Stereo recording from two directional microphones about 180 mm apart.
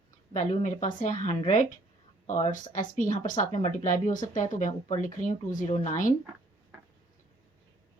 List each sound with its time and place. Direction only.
0.3 s speech: 40° left (ahead or behind)